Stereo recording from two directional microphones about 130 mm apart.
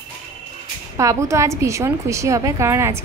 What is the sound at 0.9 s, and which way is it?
A woman's voice, 25° right (ahead or behind).